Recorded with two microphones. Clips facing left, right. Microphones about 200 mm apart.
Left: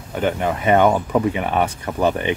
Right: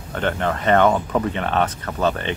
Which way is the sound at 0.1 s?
10° left (ahead or behind).